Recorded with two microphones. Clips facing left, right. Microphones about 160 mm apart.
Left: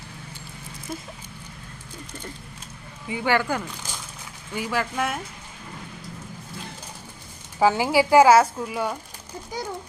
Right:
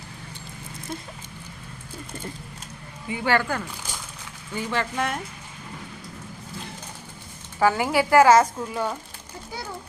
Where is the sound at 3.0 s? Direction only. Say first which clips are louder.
Even; 15° left (ahead or behind).